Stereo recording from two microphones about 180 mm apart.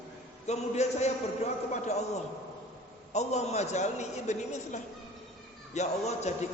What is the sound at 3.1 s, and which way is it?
A man's voice, 40° left (ahead or behind).